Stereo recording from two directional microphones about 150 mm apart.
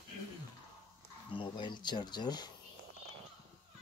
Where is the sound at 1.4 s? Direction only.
30° left (ahead or behind).